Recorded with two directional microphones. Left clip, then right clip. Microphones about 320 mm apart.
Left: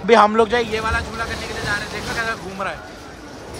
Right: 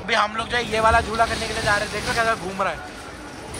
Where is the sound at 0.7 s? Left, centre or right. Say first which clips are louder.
Right 5 dB; centre.